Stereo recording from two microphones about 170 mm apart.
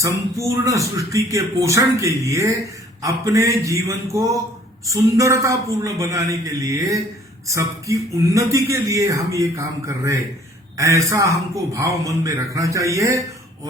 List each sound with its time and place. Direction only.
0.0 s a man's voice: 20° right (ahead or behind)